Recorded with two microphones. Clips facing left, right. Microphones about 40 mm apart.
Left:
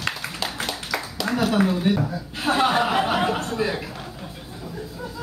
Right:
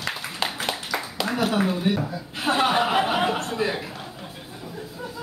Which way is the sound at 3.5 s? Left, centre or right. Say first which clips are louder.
Left 1 dB; centre.